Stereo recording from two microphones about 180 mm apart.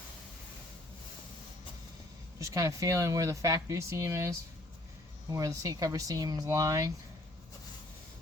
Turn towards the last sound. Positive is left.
turn(degrees=-20)  # may be behind; listen again after turning